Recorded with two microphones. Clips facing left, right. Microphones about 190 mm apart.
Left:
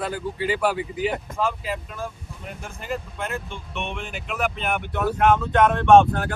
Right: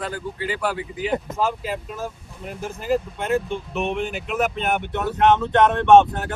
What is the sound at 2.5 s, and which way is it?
Speech, centre (ahead or behind).